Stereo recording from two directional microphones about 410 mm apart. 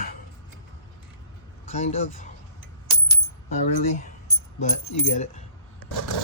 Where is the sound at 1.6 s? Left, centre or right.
Centre.